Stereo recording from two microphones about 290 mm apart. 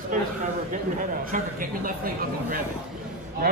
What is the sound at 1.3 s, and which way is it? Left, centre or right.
Speech, right.